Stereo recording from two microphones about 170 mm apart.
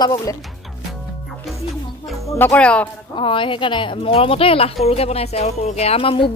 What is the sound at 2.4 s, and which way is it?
Speech, 10° left (ahead or behind).